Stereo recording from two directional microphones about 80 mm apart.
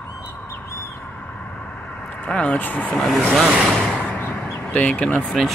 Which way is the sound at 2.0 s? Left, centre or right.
Centre.